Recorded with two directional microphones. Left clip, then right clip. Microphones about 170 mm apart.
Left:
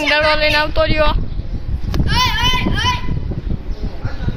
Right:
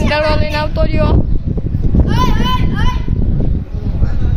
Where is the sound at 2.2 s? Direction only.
45° right (ahead or behind).